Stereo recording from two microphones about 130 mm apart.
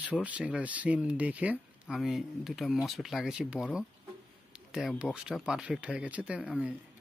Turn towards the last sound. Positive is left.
turn(degrees=-10)  # may be behind; listen again after turning